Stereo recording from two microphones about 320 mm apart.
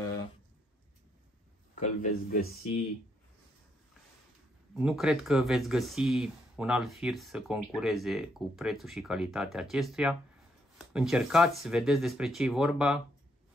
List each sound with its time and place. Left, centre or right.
1.8 s speech: left
4.7 s speech: centre